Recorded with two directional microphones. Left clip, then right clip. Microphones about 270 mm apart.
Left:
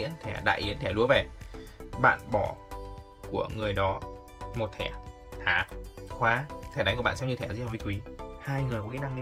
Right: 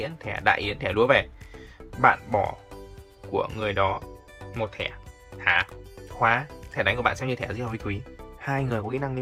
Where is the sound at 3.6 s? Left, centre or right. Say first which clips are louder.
Right 3 dB; centre.